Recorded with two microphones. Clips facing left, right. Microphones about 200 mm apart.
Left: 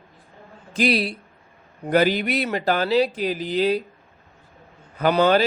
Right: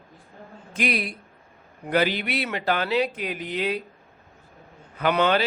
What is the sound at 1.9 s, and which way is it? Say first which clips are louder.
A man's voice: left 4 dB; 45° left (ahead or behind).